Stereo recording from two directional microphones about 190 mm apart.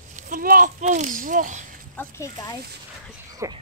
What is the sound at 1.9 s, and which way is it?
Speech, 15° left (ahead or behind).